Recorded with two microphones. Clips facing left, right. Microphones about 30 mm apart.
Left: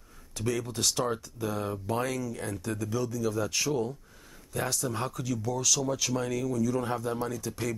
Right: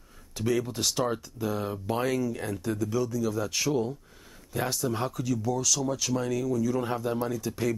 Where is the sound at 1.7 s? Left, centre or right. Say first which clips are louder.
Right 2 dB; centre.